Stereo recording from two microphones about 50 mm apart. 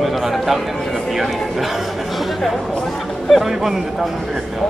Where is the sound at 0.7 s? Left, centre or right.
Centre.